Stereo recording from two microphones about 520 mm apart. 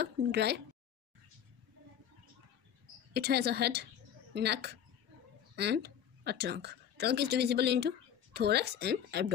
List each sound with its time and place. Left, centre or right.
0.0 s speech: centre
3.1 s a woman's voice: centre